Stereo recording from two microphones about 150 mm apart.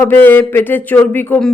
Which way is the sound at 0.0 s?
15° left (ahead or behind).